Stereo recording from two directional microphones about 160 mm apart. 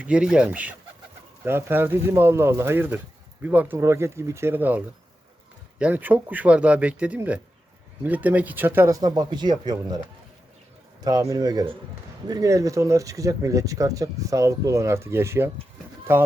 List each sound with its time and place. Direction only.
0.0 s speech: 5° right (ahead or behind)
5.8 s speech: 10° right (ahead or behind)
11.0 s speech: 20° right (ahead or behind)